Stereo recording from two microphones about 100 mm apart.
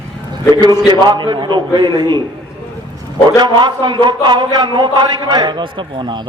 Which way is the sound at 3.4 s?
45° right (ahead or behind).